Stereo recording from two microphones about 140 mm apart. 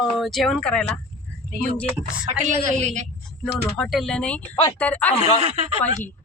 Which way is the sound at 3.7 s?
Centre (ahead or behind).